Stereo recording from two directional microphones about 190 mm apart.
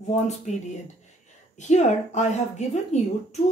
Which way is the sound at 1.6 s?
40° left (ahead or behind).